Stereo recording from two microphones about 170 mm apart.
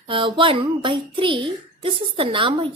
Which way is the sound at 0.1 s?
30° right (ahead or behind).